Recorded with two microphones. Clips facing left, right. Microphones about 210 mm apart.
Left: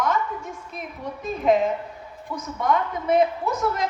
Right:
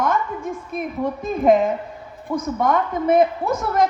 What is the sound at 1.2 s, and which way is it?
A man's voice, 50° right (ahead or behind).